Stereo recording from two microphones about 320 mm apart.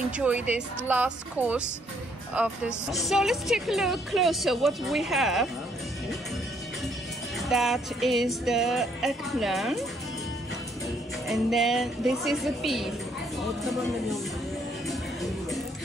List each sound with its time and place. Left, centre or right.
0.2 s a woman's voice: centre
7.3 s a woman's voice: centre
11.2 s a woman's voice: centre